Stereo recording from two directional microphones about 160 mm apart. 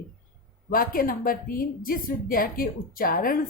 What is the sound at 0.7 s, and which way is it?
A woman's voice, 60° left (ahead or behind).